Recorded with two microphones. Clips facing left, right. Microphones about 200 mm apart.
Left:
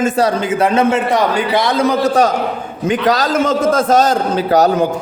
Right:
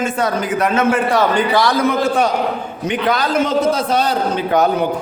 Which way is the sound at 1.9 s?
40° left (ahead or behind).